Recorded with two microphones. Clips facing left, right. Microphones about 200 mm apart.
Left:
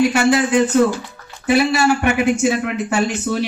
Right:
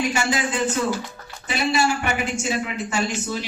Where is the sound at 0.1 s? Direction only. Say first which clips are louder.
Left 9 dB; 65° left (ahead or behind).